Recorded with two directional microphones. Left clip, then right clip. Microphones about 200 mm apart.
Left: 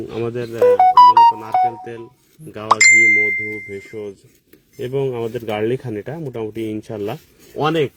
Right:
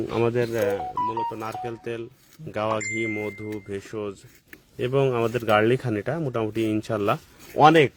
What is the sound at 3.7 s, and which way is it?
Speech, 20° right (ahead or behind).